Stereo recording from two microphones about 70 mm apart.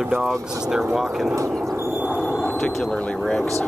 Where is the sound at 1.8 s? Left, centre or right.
Right.